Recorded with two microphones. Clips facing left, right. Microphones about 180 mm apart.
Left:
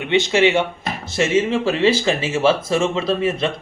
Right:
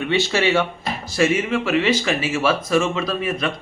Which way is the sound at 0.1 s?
20° left (ahead or behind).